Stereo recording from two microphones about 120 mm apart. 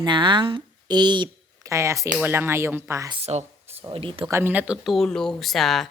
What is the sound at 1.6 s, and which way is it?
Speech, 25° right (ahead or behind).